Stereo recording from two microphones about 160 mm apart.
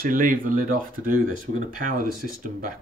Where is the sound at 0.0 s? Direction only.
60° right (ahead or behind).